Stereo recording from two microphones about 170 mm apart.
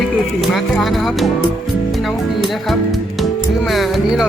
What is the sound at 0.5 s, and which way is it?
Speech, centre (ahead or behind).